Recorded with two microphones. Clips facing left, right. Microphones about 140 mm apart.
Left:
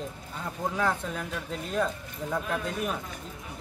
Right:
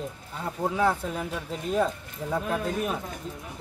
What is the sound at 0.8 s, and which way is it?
Speech, 10° right (ahead or behind).